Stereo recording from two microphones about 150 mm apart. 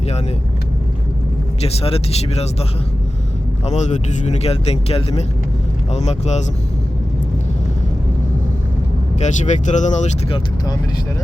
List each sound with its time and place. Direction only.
1.6 s speech: 40° left (ahead or behind)
3.7 s speech: 50° left (ahead or behind)
9.1 s speech: 50° left (ahead or behind)